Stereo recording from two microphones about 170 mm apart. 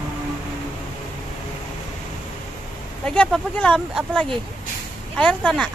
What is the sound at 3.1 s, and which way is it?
Speech, 5° left (ahead or behind).